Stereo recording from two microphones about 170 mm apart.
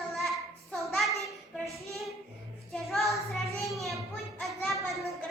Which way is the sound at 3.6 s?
Centre (ahead or behind).